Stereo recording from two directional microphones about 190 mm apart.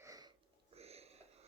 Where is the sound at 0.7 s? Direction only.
35° right (ahead or behind).